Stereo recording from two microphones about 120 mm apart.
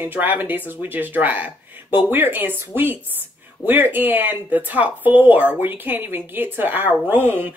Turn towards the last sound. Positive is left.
turn(degrees=-15)  # may be behind; listen again after turning